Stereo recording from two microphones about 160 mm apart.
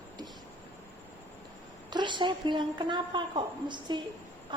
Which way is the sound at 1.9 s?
30° right (ahead or behind).